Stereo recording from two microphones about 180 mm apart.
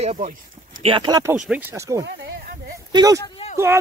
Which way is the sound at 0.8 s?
25° right (ahead or behind).